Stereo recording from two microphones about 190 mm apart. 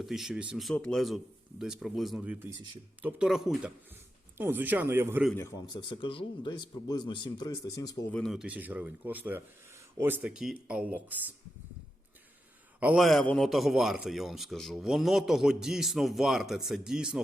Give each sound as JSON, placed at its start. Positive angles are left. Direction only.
{"t": 0.0, "sound": "a man's voice", "side_deg": 0}
{"t": 5.3, "sound": "speech", "side_deg": 15}
{"t": 8.1, "sound": "speech", "side_deg": 0}
{"t": 12.8, "sound": "a man's voice", "side_deg": -5}